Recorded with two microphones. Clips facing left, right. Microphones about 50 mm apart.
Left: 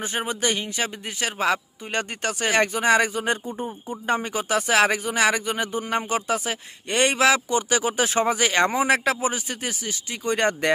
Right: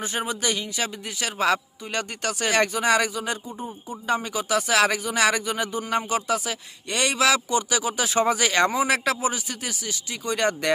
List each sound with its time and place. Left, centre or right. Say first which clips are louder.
0.0 s speech: left 1 dB; left
3.2 s speech: left 4 dB; left
4.1 s speech: even; left
8.2 s speech: right 1 dB; centre